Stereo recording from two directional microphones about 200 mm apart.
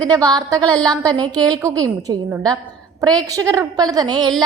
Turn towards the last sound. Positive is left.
turn(degrees=-20)  # may be behind; listen again after turning